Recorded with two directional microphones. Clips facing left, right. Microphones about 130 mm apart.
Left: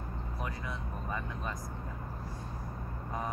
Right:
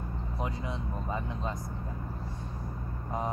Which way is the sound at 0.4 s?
20° right (ahead or behind).